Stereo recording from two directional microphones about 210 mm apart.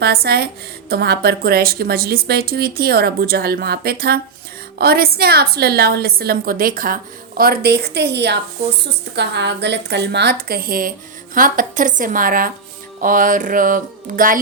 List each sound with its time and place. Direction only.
0.0 s a woman's voice: 50° right (ahead or behind)
11.3 s music: 40° right (ahead or behind)